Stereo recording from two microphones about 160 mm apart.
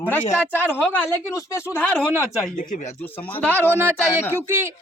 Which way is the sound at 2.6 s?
50° left (ahead or behind).